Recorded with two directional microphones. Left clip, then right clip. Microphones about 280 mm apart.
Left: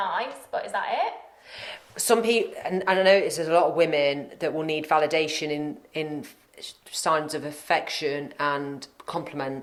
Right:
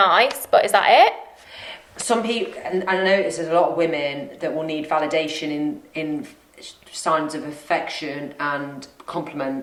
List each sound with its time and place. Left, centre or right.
0.0 s a woman's voice: right
1.5 s a woman's voice: left